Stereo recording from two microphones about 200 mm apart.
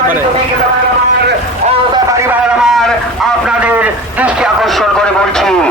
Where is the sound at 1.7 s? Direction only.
20° right (ahead or behind); by 5.7 s 5° left (ahead or behind).